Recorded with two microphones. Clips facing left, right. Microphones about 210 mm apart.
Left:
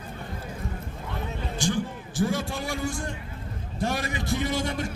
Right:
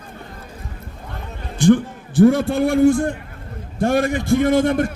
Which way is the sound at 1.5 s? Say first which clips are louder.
Right 14 dB; 55° right (ahead or behind).